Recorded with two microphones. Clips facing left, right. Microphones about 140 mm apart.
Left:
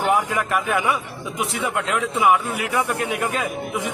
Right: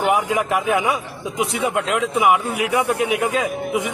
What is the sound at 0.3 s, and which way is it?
Speech, 20° right (ahead or behind).